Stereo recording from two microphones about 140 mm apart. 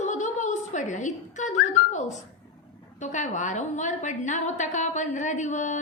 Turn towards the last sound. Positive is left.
turn(degrees=60)  # may be behind; listen again after turning